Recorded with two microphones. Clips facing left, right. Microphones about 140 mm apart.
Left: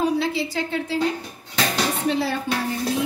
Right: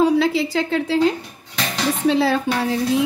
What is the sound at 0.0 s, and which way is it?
A woman's voice, 90° right.